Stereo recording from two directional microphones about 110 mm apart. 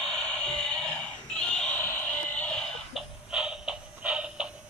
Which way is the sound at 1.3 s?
10° left (ahead or behind).